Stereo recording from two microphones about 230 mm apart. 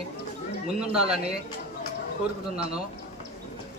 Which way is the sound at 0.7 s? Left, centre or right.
Right.